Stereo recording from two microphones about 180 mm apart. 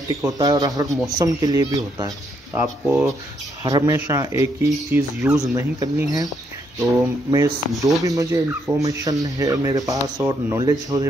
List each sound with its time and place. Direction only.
0.1 s speech: 20° right (ahead or behind)
2.8 s speech: 5° right (ahead or behind)
3.6 s speech: 20° right (ahead or behind)